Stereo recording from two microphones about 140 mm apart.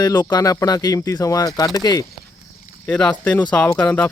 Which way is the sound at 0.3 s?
25° left (ahead or behind).